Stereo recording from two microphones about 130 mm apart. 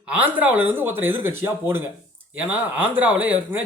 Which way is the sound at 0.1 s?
10° right (ahead or behind).